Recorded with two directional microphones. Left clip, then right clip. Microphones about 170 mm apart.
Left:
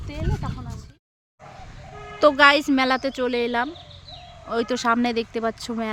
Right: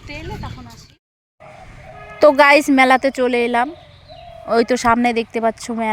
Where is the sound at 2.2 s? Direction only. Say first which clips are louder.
Right 5 dB; 30° right (ahead or behind).